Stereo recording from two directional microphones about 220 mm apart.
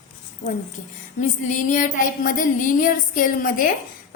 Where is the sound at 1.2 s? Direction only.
35° left (ahead or behind).